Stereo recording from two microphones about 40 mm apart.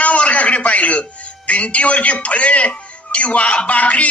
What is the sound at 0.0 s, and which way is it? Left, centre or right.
A man's voice, left.